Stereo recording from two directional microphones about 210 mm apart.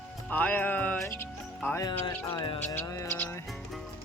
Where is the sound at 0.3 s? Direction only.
10° left (ahead or behind).